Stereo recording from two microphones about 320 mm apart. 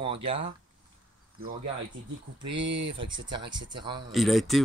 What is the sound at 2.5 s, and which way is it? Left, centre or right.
Speech, right.